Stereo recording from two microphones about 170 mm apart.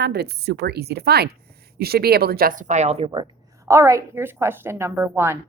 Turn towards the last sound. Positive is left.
turn(degrees=-15)  # may be behind; listen again after turning